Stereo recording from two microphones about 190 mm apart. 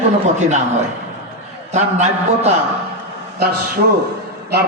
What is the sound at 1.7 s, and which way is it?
Speech, 35° right (ahead or behind).